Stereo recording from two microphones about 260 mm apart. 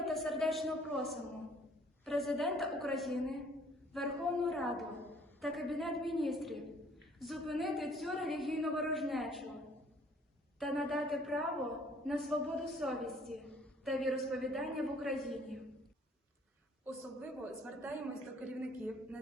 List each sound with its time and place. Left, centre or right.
0.0 s a man's voice: centre
10.6 s a man's voice: centre
16.8 s a man's voice: centre